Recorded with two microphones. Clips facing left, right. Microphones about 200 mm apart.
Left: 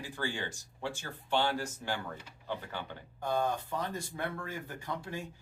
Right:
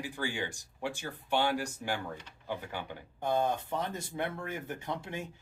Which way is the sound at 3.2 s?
20° right (ahead or behind).